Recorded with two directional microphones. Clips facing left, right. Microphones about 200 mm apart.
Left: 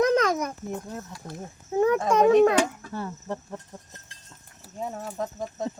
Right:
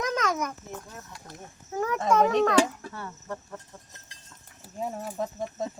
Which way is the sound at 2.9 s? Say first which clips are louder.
Left 5 dB; 30° left (ahead or behind).